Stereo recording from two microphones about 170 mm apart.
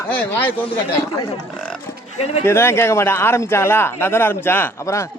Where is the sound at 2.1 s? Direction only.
40° left (ahead or behind).